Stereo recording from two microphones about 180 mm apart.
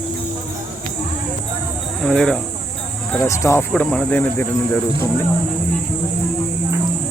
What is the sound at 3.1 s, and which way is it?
Speech, 15° left (ahead or behind).